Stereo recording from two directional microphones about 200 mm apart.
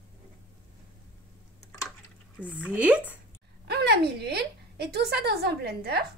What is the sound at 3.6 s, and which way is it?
A woman's voice, 55° right (ahead or behind).